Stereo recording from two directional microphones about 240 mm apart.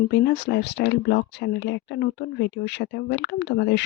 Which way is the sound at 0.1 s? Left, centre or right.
Left.